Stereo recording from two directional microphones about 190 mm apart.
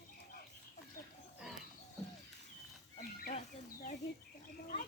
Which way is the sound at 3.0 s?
50° left (ahead or behind).